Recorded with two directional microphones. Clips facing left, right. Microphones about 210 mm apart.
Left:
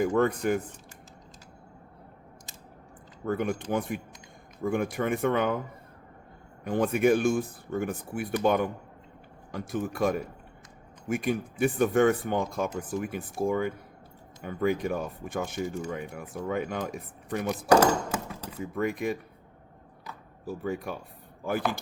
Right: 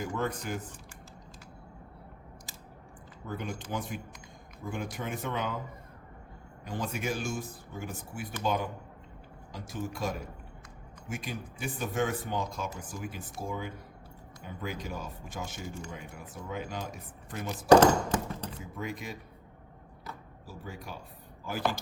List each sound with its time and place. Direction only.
0.0 s speech: 60° left (ahead or behind)
3.2 s speech: 55° left (ahead or behind)
6.7 s speech: 55° left (ahead or behind)
17.7 s a sound: 10° left (ahead or behind)
18.6 s speech: 55° left (ahead or behind)
20.4 s speech: 55° left (ahead or behind)